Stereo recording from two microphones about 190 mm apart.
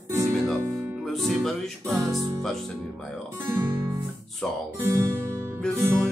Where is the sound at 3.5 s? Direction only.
15° right (ahead or behind).